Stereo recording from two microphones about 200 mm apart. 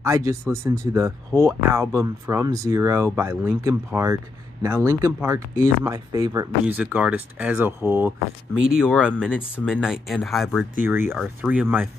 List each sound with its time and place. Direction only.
0.0 s speech: 15° right (ahead or behind)
6.6 s speech: 5° right (ahead or behind)